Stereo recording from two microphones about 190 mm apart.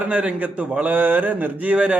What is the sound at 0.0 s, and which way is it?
A man's voice, 5° right (ahead or behind).